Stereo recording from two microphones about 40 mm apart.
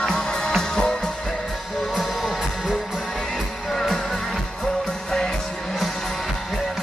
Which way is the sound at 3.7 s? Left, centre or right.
Centre.